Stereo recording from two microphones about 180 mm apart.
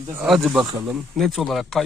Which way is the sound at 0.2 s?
Centre (ahead or behind).